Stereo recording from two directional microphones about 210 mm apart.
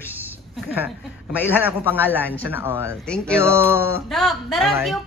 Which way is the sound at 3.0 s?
5° left (ahead or behind).